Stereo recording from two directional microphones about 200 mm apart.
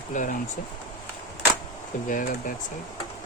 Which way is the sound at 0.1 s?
40° left (ahead or behind).